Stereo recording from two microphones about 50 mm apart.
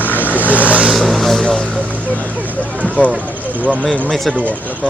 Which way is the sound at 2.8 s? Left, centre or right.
Left.